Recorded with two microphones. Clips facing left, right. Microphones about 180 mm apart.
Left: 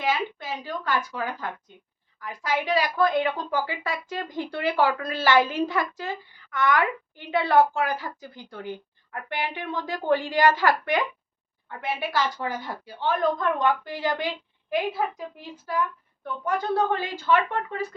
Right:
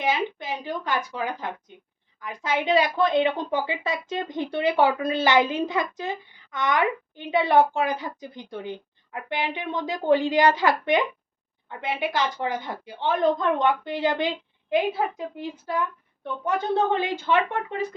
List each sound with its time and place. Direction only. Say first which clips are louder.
0.0 s a woman's voice: right 1 dB; 20° right (ahead or behind)